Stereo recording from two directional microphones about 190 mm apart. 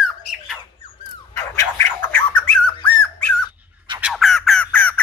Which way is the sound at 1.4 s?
15° left (ahead or behind).